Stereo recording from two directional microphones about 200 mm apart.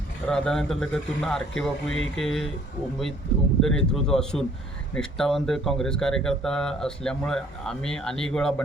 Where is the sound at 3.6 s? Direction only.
Centre (ahead or behind).